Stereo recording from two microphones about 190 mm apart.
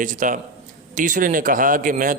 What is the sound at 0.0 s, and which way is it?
A man's voice, 45° right (ahead or behind).